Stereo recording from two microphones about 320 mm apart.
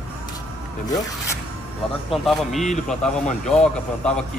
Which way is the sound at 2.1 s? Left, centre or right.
Centre.